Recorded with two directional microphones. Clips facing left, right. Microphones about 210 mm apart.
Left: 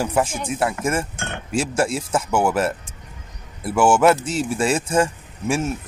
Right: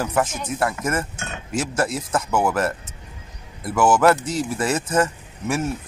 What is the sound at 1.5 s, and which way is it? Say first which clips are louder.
Speech: left 2 dB; 30° left (ahead or behind).